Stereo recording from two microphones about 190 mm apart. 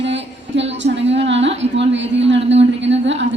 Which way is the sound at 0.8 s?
70° right (ahead or behind).